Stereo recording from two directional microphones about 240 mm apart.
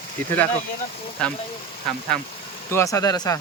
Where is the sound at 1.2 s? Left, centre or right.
Centre.